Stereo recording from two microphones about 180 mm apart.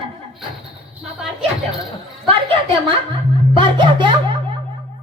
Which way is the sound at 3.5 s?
25° right (ahead or behind).